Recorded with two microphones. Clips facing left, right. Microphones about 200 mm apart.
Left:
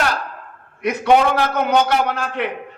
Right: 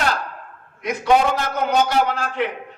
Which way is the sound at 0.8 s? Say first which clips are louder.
Left 2 dB; 60° left (ahead or behind).